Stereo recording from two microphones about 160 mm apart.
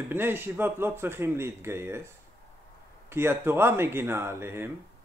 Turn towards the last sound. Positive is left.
turn(degrees=-15)  # may be behind; listen again after turning